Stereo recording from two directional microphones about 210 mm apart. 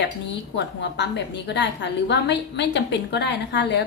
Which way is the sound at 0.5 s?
55° left (ahead or behind).